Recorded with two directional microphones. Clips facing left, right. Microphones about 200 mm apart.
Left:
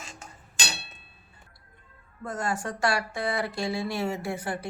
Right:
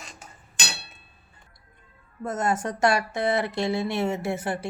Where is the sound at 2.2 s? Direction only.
20° right (ahead or behind).